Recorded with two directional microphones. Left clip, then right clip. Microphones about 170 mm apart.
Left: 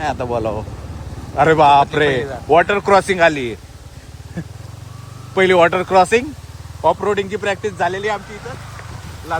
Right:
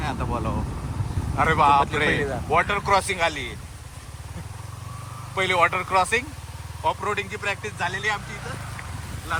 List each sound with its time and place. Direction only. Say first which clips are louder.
0.0 s speech: left 9 dB; 70° left (ahead or behind)
5.3 s speech: left 8 dB; 60° left (ahead or behind)